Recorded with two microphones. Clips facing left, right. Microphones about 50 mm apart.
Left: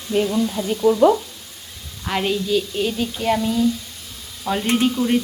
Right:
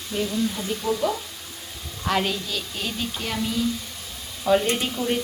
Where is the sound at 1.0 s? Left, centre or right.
Left.